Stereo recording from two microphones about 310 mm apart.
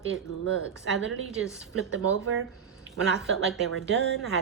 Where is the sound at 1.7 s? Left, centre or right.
Right.